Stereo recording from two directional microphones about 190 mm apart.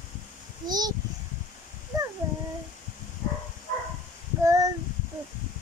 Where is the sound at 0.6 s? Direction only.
20° right (ahead or behind).